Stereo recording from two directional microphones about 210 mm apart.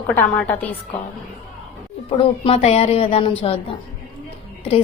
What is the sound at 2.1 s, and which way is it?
A woman's voice, 25° left (ahead or behind).